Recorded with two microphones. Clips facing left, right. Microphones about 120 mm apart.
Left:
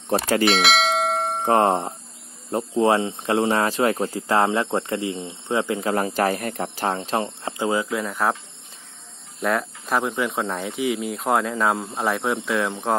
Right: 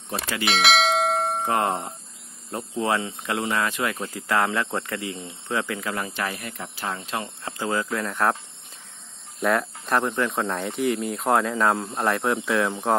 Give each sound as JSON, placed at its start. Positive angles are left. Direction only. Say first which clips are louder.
{"t": 0.1, "sound": "speech", "louder": "left 9 dB", "side_deg": 40}
{"t": 0.5, "sound": "bell", "louder": "right 3 dB", "side_deg": 0}
{"t": 1.4, "sound": "speech", "louder": "left 5 dB", "side_deg": 30}
{"t": 9.4, "sound": "speech", "louder": "even", "side_deg": 0}